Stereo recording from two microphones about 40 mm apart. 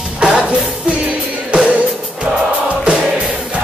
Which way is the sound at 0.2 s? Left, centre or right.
Right.